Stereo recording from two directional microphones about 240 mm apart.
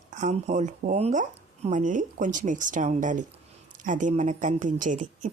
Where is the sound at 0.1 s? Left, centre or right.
Right.